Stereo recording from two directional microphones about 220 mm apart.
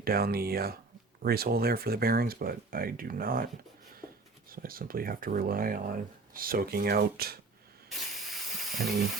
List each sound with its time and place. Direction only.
0.0 s speech: 45° right (ahead or behind)
7.9 s steam: centre (ahead or behind)